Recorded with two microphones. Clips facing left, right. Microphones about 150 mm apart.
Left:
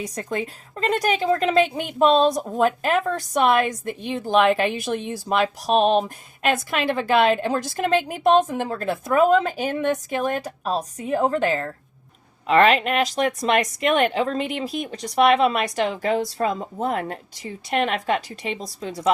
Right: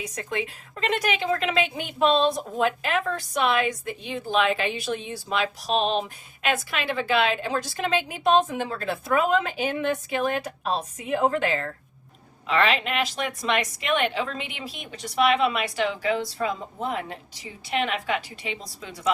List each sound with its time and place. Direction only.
0.0 s a woman's voice: 40° left (ahead or behind)
12.5 s a woman's voice: 50° left (ahead or behind)